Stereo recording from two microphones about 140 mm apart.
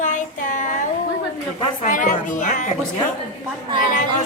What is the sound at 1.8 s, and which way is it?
Speech, 65° left (ahead or behind).